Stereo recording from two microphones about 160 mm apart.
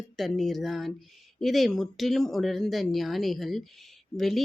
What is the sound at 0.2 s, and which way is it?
Speech, centre (ahead or behind).